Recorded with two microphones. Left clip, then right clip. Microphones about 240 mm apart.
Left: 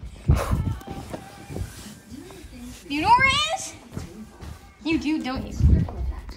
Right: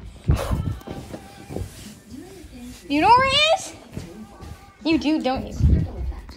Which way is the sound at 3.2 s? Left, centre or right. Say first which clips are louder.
Right 3 dB; centre.